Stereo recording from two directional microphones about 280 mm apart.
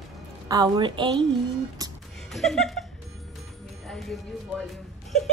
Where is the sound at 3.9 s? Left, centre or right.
Centre.